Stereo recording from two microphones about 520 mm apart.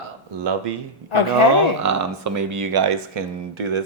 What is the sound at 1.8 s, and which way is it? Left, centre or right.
Speech, right.